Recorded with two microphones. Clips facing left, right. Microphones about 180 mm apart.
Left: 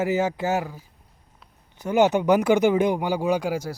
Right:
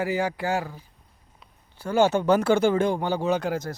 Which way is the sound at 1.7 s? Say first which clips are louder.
Left 2 dB; 20° left (ahead or behind).